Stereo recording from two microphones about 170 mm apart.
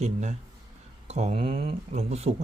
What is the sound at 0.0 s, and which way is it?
A man's voice, 45° right (ahead or behind).